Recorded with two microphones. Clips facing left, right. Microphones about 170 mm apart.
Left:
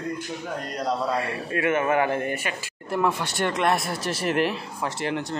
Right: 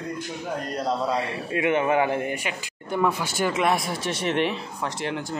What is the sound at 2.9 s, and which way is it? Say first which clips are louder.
Speech: even; centre (ahead or behind).